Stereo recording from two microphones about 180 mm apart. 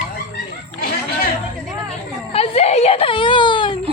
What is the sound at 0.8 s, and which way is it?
Chatter, 55° left (ahead or behind).